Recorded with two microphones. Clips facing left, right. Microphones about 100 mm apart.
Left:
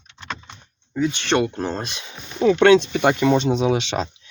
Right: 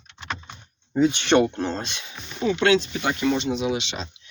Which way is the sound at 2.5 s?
70° left (ahead or behind).